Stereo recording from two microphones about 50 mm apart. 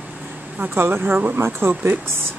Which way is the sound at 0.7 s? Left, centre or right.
Right.